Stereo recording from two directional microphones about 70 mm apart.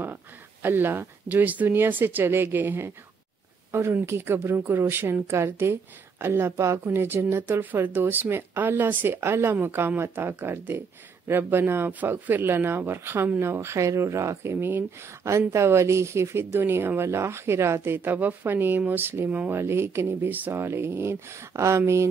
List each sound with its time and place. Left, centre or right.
0.0 s speech: right
6.5 s speech: right
15.2 s speech: right
19.5 s speech: right